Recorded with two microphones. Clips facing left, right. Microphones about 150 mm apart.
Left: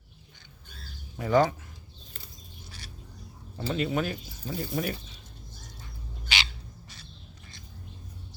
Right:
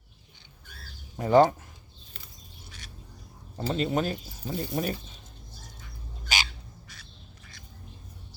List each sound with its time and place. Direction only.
1.1 s speech: 35° right (ahead or behind)
3.7 s speech: 35° right (ahead or behind)
6.2 s bird: 45° right (ahead or behind)
6.8 s bird: 30° left (ahead or behind)